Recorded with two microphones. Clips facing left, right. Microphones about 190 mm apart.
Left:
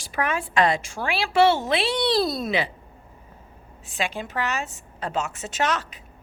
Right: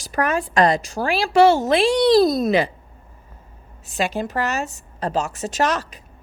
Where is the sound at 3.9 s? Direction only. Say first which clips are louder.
Right 6 dB; 40° right (ahead or behind).